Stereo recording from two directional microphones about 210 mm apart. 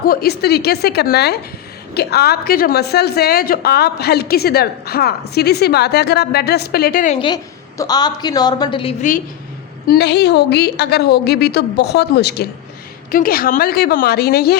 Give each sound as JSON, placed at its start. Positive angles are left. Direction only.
{"t": 0.0, "sound": "a woman's voice", "side_deg": 45}
{"t": 7.2, "sound": "a woman's voice", "side_deg": 20}
{"t": 9.8, "sound": "a woman's voice", "side_deg": 50}